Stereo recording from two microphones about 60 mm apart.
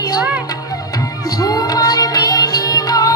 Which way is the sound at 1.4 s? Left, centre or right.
Left.